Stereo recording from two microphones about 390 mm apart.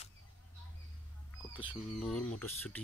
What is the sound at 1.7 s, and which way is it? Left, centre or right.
Speech, centre.